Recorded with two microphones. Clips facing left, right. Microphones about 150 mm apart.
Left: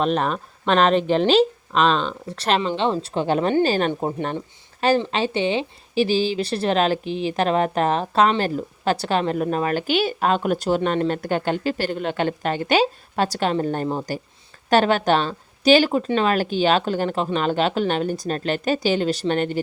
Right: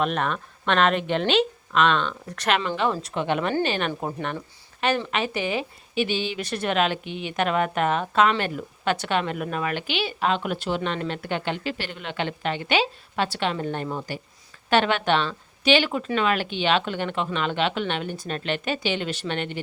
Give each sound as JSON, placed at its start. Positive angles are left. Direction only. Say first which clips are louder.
{"t": 0.0, "sound": "a woman's voice", "louder": "left 4 dB", "side_deg": 35}